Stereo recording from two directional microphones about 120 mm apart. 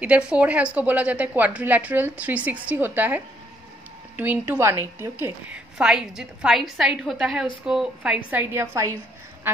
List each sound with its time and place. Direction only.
0.0 s a woman's voice: 10° right (ahead or behind)
4.2 s a woman's voice: 15° right (ahead or behind)
5.8 s a woman's voice: 5° right (ahead or behind)